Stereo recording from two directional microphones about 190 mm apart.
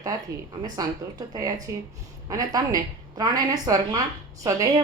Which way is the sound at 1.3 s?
20° right (ahead or behind).